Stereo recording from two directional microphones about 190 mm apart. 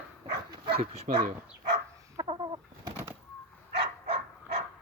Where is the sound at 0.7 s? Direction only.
35° right (ahead or behind).